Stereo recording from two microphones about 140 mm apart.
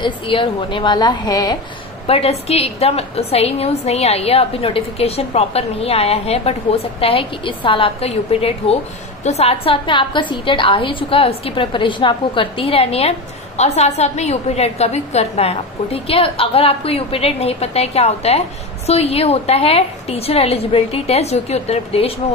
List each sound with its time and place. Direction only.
0.0 s a woman's voice: 35° left (ahead or behind)
2.0 s a woman's voice: 45° left (ahead or behind)